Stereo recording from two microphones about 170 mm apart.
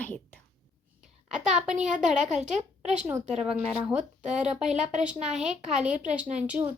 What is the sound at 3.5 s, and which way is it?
A woman's voice, 5° right (ahead or behind).